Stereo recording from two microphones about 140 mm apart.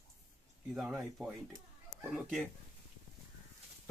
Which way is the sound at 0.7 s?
Centre (ahead or behind).